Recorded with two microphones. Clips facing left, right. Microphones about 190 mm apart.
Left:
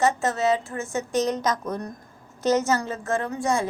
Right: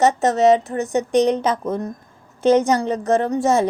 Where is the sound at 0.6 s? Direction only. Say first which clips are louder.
Right 8 dB; 40° right (ahead or behind).